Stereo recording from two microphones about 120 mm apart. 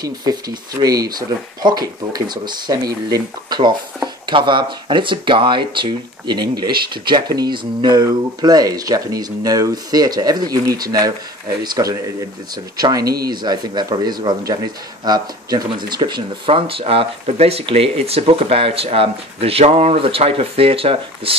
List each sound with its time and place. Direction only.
0.0 s speech: 35° right (ahead or behind)
16.4 s speech: 50° right (ahead or behind)